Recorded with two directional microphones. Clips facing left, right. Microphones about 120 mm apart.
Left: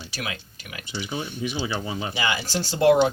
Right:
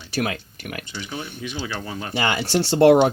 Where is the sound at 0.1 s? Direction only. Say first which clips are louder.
Right 11 dB; 50° right (ahead or behind).